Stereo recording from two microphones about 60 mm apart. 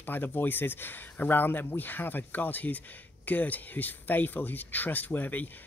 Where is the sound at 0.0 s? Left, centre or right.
Left.